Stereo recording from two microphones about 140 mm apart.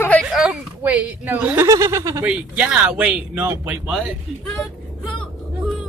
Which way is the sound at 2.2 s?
10° right (ahead or behind).